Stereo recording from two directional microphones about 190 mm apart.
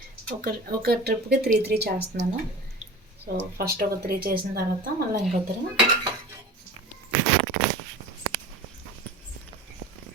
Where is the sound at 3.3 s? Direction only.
55° right (ahead or behind).